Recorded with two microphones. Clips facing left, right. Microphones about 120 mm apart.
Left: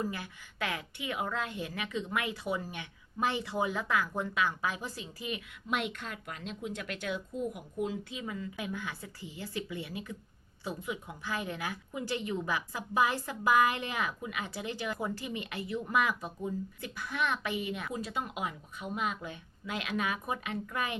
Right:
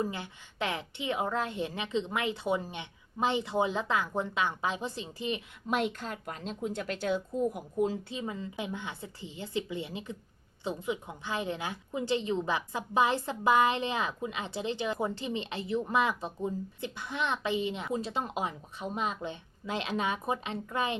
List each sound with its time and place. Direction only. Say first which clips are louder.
0.0 s a woman's voice: right 2 dB; 25° right (ahead or behind)